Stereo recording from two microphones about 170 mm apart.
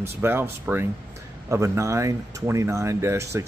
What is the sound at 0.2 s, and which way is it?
Speech, 10° right (ahead or behind).